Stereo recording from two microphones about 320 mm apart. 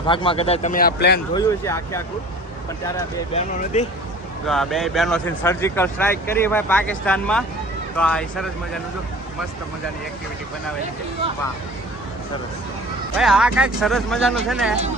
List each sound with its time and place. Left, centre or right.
0.1 s a man's voice: centre
1.3 s speech: centre
3.3 s a man's voice: left
4.4 s speech: centre
13.1 s speech: centre